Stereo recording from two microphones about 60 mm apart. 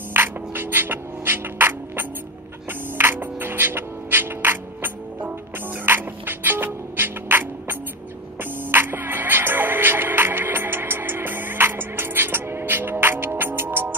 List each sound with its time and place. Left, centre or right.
0.1 s music: right